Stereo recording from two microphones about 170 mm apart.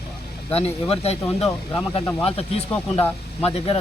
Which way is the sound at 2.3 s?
35° left (ahead or behind).